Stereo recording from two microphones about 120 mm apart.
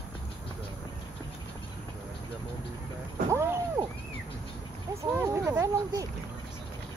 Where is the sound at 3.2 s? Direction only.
20° right (ahead or behind).